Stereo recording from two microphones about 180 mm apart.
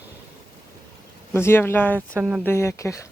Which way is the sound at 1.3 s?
15° left (ahead or behind).